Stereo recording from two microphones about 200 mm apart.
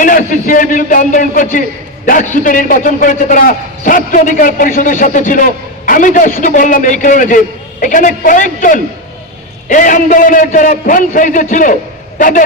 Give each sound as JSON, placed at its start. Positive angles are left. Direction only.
{"t": 0.0, "sound": "a man's voice", "side_deg": 40}